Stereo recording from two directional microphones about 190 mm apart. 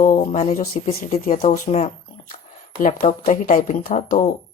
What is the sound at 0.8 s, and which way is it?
Speech, 35° left (ahead or behind).